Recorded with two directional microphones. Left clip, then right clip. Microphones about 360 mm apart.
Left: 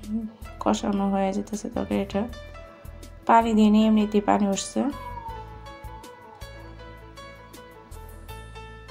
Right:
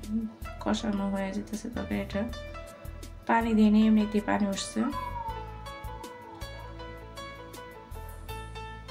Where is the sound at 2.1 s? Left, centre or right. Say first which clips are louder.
Left 4 dB; centre.